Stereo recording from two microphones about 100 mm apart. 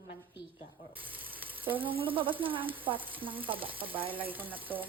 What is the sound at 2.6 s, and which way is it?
Stir, 15° right (ahead or behind).